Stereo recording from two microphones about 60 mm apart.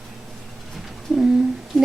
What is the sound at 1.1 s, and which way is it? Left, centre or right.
Humming, centre.